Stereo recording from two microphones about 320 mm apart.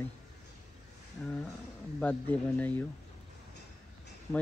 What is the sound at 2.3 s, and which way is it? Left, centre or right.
Speech, centre.